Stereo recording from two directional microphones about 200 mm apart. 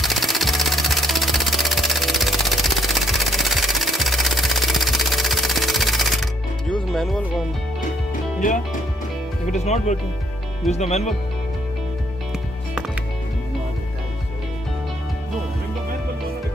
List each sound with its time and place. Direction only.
0.0 s sewing machine: centre (ahead or behind)
6.7 s music: centre (ahead or behind)
8.4 s speech: 40° left (ahead or behind)